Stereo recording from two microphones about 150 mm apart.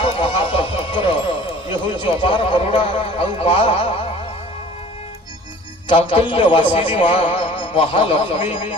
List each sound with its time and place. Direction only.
0.0 s music: 35° left (ahead or behind)
5.9 s a man's voice: 35° left (ahead or behind)